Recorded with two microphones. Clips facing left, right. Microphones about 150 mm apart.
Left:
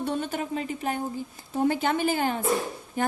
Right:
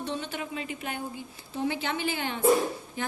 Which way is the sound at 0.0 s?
50° left (ahead or behind).